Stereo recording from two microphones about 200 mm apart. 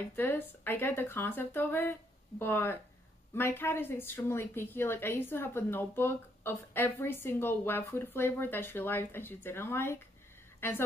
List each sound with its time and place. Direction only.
0.1 s a woman's voice: 10° left (ahead or behind)